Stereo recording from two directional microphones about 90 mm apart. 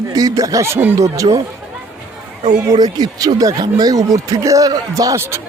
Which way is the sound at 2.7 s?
45° right (ahead or behind).